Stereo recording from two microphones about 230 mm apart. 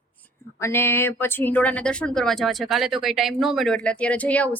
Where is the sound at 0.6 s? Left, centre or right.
Centre.